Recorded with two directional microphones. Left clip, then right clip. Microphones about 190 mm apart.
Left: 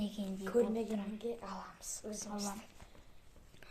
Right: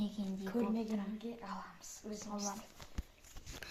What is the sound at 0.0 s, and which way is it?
Speech, 5° left (ahead or behind).